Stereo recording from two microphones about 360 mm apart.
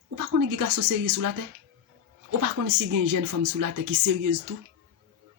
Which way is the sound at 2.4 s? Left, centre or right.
Right.